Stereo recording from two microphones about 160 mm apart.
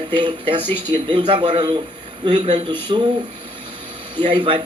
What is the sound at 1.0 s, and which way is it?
A man's voice, 30° right (ahead or behind).